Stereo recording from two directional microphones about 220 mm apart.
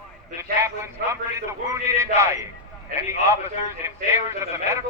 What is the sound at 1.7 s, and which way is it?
Speech, 15° right (ahead or behind).